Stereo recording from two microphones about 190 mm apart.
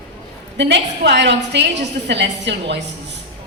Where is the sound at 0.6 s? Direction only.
65° right (ahead or behind).